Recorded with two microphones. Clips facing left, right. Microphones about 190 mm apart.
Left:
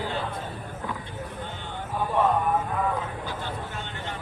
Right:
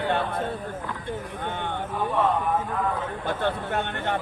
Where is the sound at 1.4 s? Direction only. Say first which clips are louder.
Right 7 dB; 60° right (ahead or behind).